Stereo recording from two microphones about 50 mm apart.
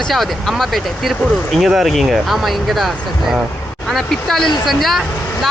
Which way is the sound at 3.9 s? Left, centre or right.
Centre.